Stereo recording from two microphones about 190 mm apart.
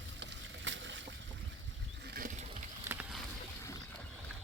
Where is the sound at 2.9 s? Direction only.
5° right (ahead or behind).